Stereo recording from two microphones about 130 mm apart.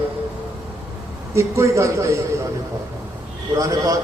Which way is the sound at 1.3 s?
25° right (ahead or behind).